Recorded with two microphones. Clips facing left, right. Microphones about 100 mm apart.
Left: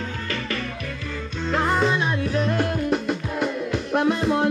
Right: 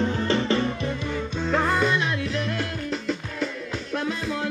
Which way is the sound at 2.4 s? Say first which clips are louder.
Left 6 dB; 45° left (ahead or behind).